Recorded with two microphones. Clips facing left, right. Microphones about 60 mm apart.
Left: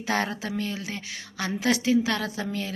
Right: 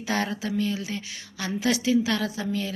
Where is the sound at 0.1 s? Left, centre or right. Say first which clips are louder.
Even; left.